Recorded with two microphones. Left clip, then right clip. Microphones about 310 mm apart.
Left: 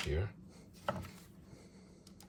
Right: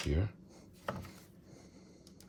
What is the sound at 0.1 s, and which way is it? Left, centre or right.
Speech, right.